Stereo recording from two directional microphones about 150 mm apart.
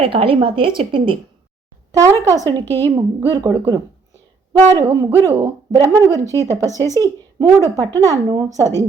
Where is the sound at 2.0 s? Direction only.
25° right (ahead or behind).